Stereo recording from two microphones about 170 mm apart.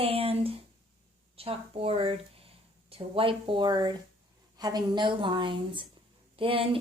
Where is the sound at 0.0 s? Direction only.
35° right (ahead or behind).